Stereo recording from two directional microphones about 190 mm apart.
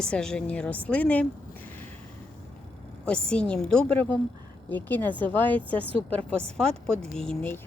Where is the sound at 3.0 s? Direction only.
5° left (ahead or behind).